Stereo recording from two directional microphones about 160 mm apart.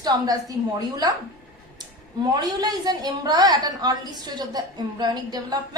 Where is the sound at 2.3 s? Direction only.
25° right (ahead or behind).